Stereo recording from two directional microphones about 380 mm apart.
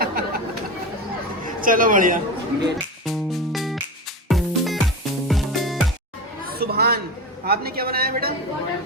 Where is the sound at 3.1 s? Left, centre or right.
Centre.